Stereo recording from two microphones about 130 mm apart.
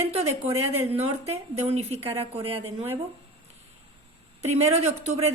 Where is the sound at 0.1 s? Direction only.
55° right (ahead or behind).